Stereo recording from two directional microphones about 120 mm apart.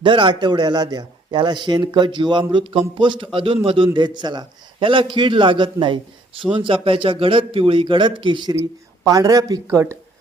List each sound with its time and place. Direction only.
0.0 s a man's voice: 45° right (ahead or behind)
9.0 s speech: 30° right (ahead or behind)